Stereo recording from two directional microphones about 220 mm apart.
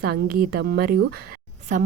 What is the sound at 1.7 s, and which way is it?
Speech, 35° right (ahead or behind).